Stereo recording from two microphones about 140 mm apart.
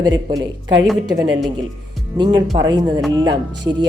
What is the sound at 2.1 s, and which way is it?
Speech, 30° right (ahead or behind).